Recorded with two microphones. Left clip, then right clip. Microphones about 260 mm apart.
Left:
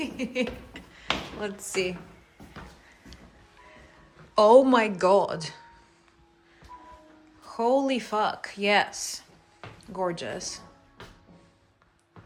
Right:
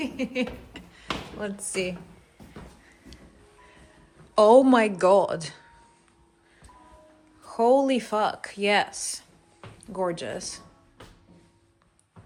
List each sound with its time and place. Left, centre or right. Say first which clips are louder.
0.0 s a sound: even; centre
4.4 s a woman's voice: right 1 dB; centre
7.4 s speech: right 4 dB; centre